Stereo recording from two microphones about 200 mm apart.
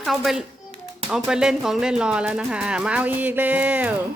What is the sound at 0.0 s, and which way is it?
Speech, centre (ahead or behind).